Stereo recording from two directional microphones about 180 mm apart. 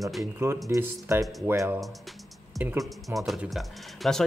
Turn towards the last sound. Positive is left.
turn(degrees=0)  # may be behind; listen again after turning